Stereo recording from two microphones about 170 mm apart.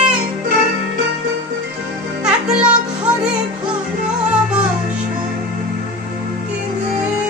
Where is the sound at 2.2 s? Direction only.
5° right (ahead or behind).